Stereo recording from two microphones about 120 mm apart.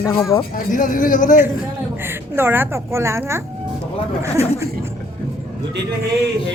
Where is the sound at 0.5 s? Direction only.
90° left.